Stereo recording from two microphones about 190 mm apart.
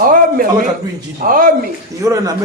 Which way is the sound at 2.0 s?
15° right (ahead or behind).